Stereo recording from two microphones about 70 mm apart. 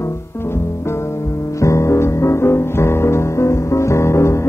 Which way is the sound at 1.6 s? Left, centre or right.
Left.